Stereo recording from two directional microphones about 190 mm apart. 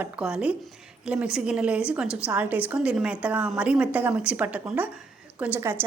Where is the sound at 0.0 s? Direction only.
5° right (ahead or behind).